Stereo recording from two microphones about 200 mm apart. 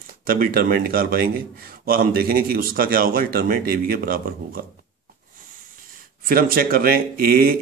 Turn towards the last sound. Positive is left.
turn(degrees=-45)  # may be behind; listen again after turning